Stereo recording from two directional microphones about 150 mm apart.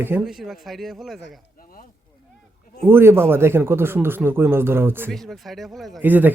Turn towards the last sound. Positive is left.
turn(degrees=-10)  # may be behind; listen again after turning